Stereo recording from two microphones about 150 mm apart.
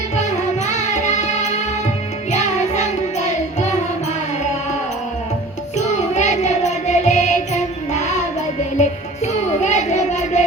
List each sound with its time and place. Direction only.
0.2 s music: 50° left (ahead or behind)
5.7 s music: 50° left (ahead or behind)